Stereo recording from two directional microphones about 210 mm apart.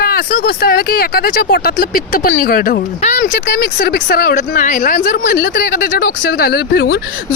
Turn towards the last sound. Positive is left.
turn(degrees=45)  # may be behind; listen again after turning